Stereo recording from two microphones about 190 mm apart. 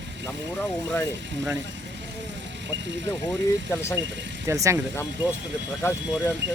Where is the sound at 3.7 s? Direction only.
15° left (ahead or behind).